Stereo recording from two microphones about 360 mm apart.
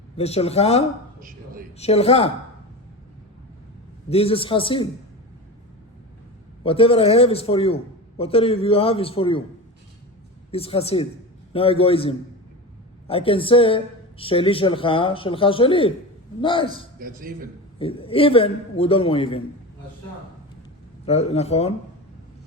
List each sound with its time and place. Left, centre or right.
0.2 s a woman's voice: centre
4.1 s a woman's voice: centre
6.6 s a woman's voice: centre
10.5 s a woman's voice: centre
17.0 s a man's voice: right
17.7 s a woman's voice: centre
21.1 s a woman's voice: centre